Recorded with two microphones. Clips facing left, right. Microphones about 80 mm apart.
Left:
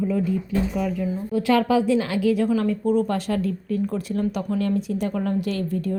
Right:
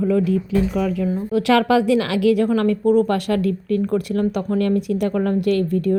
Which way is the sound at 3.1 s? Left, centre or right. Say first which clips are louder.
Right 5 dB; right.